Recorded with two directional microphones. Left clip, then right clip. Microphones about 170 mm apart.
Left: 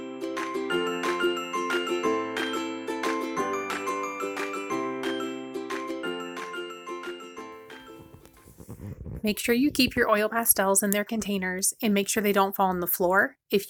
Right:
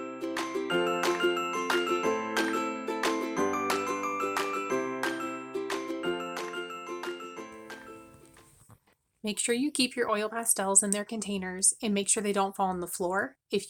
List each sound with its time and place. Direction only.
0.0 s music: centre (ahead or behind)
9.2 s speech: 20° left (ahead or behind)